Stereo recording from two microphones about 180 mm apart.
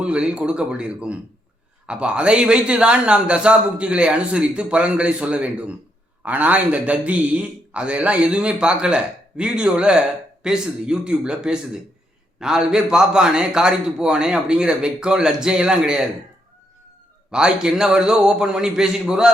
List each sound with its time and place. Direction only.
0.0 s a man's voice: 5° right (ahead or behind)
17.3 s a man's voice: 5° right (ahead or behind)